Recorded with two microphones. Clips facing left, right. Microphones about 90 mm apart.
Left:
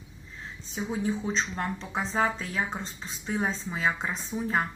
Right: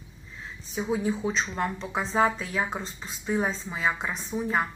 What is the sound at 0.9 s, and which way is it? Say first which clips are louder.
Speech: right 2 dB; 20° right (ahead or behind).